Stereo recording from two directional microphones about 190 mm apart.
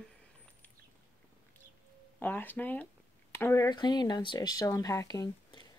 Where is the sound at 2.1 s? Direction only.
10° left (ahead or behind).